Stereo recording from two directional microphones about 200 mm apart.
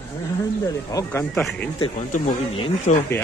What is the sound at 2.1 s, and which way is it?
Speech, 35° left (ahead or behind).